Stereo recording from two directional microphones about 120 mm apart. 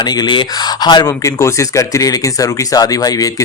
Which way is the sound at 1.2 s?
25° left (ahead or behind).